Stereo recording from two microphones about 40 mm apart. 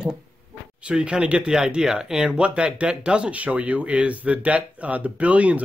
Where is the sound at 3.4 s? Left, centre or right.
Right.